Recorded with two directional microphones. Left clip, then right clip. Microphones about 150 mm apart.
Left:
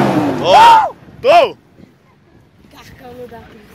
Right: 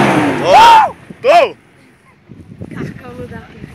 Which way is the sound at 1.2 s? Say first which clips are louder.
Even; 25° left (ahead or behind).